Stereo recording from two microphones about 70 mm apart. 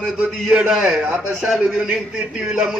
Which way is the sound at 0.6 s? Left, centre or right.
Centre.